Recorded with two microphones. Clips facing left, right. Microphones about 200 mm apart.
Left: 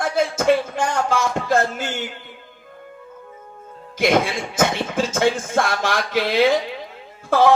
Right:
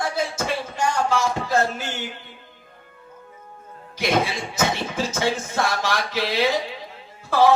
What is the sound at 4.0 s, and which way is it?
Speech, 50° left (ahead or behind).